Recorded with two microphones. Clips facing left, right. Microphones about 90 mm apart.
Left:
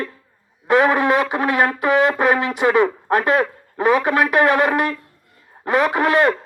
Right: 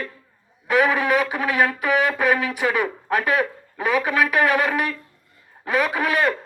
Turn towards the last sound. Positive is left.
turn(degrees=25)  # may be behind; listen again after turning